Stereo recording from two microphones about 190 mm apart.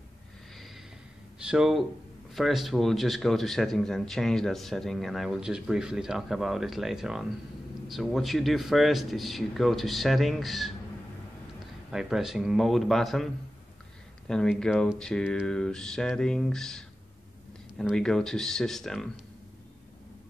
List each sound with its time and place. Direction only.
1.4 s speech: 5° right (ahead or behind)
11.9 s speech: centre (ahead or behind)